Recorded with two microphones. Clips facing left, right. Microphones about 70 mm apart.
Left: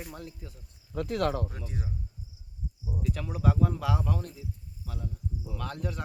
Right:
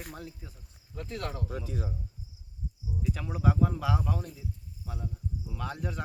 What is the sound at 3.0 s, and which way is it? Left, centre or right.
Speech, centre.